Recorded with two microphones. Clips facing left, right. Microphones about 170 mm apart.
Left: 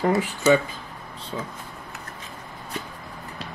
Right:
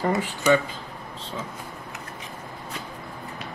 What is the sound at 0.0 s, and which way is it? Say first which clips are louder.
Speech: left 3 dB; 5° left (ahead or behind).